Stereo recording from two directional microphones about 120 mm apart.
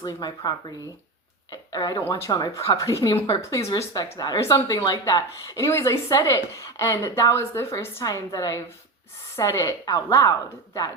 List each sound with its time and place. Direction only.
0.0 s a woman's voice: 30° left (ahead or behind)